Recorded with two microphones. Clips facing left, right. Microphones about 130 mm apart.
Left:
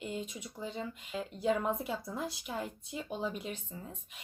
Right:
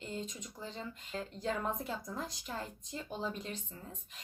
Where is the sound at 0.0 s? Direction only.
10° left (ahead or behind).